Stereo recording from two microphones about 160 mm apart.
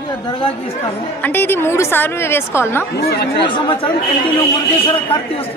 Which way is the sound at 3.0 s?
80° left.